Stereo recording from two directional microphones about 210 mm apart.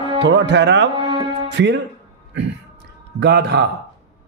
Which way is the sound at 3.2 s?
55° right (ahead or behind).